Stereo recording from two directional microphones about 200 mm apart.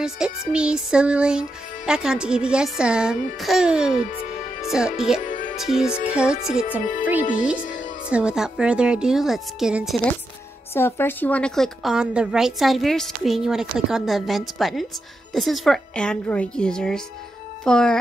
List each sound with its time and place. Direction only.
0.0 s a woman's voice: 5° right (ahead or behind)
5.2 s music: 40° left (ahead or behind)
5.6 s a woman's voice: centre (ahead or behind)
8.1 s a woman's voice: 5° right (ahead or behind)
10.7 s a woman's voice: 10° left (ahead or behind)